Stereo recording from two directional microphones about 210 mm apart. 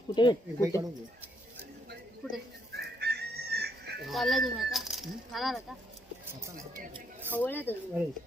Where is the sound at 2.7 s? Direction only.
50° right (ahead or behind).